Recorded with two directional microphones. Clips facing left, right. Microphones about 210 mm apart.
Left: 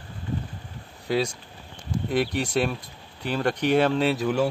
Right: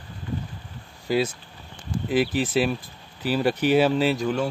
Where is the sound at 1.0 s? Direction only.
5° right (ahead or behind).